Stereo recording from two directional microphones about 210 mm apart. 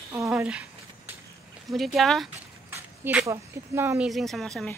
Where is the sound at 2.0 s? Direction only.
Centre (ahead or behind).